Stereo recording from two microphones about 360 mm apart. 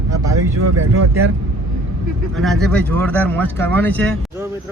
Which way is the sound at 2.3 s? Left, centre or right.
Centre.